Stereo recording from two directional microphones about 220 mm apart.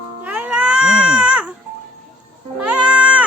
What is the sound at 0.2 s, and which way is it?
Baby cry, 5° right (ahead or behind).